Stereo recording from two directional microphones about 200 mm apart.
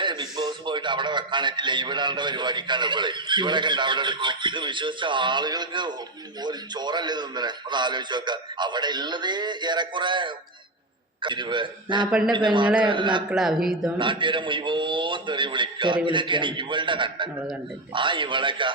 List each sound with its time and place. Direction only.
0.0 s a man's voice: 20° right (ahead or behind)
13.3 s speech: centre (ahead or behind)
14.0 s a man's voice: 25° right (ahead or behind)